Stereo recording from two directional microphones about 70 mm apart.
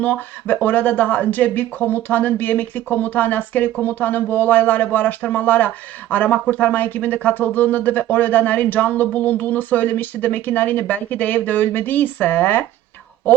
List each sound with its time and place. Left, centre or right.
0.0 s speech: left